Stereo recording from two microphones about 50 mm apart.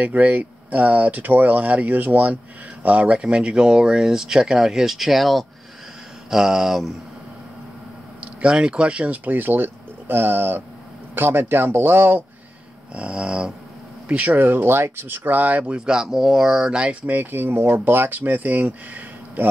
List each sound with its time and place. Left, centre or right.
0.0 s speech: right; by 6.9 s centre
8.2 s speech: right
12.9 s dog: right
14.0 s speech: right
15.6 s speech: centre
17.0 s speech: right